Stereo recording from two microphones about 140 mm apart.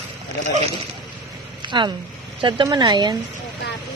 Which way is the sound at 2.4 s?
35° right (ahead or behind).